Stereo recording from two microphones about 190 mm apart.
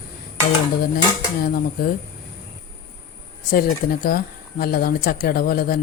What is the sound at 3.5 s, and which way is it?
Speech, 50° left (ahead or behind).